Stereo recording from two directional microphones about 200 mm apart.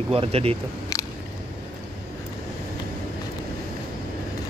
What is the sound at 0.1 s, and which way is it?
Speech, 30° right (ahead or behind).